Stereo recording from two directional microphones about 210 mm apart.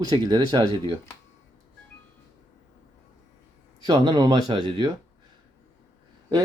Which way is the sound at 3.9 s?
20° right (ahead or behind).